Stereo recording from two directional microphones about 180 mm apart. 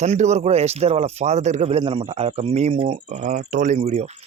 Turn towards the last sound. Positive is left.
turn(degrees=-35)  # may be behind; listen again after turning